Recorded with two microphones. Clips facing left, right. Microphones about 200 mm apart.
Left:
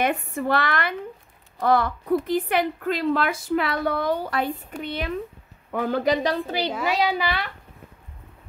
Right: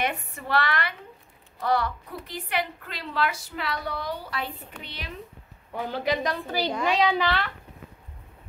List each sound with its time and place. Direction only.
0.0 s a woman's voice: 50° left (ahead or behind)
6.2 s a woman's voice: 30° left (ahead or behind)
6.7 s a child's voice: 5° left (ahead or behind)